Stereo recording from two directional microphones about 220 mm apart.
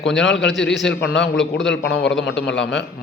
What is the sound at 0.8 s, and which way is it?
A man's voice, 55° left (ahead or behind).